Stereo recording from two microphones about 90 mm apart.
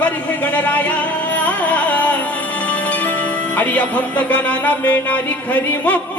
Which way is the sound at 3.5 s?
15° left (ahead or behind).